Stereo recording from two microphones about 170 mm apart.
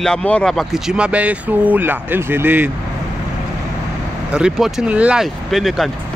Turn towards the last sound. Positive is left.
turn(degrees=0)  # may be behind; listen again after turning